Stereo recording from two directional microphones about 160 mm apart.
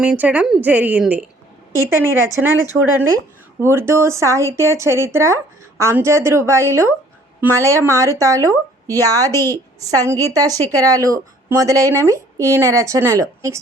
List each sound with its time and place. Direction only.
0.0 s speech: 10° right (ahead or behind)
3.6 s a woman's voice: 15° right (ahead or behind)